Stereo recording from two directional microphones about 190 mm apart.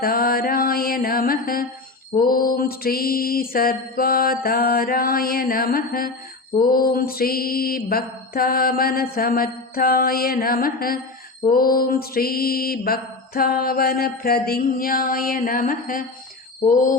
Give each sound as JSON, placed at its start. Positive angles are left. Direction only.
{"t": 0.0, "sound": "mantra", "side_deg": 50}